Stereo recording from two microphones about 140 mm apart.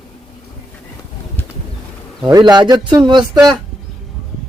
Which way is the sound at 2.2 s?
30° right (ahead or behind).